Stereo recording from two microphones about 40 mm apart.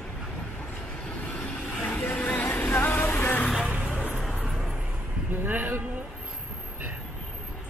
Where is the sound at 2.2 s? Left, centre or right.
Left.